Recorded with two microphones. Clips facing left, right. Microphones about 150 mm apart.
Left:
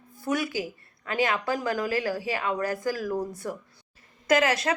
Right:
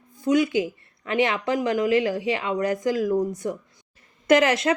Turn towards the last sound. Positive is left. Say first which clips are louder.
# right 5 dB
turn(degrees=30)  # may be behind; listen again after turning